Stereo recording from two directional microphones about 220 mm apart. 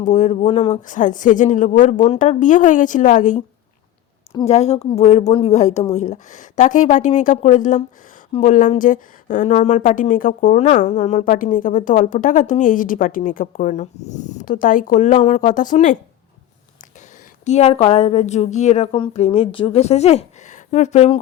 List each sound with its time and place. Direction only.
0.0 s a woman's voice: 35° left (ahead or behind)
4.4 s a woman's voice: 30° left (ahead or behind)
17.4 s a woman's voice: 30° left (ahead or behind)